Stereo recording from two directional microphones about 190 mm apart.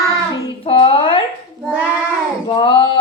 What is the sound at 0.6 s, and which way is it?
Speech, 25° left (ahead or behind).